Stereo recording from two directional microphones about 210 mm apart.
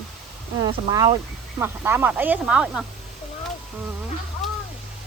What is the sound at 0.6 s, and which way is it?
Speech, 15° right (ahead or behind).